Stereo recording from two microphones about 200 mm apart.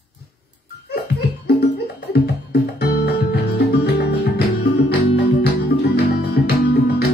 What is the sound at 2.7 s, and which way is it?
Music, 50° left (ahead or behind).